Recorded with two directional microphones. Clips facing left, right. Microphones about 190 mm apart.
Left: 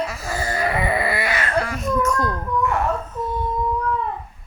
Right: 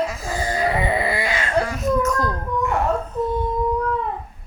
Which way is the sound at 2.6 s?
20° right (ahead or behind).